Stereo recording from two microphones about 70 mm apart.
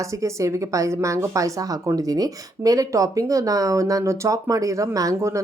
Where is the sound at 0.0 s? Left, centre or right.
Right.